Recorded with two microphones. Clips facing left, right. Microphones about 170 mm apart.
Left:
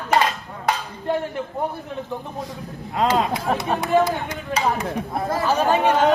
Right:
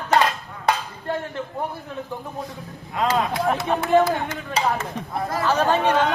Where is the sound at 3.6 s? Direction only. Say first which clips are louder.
Right 1 dB; 15° left (ahead or behind).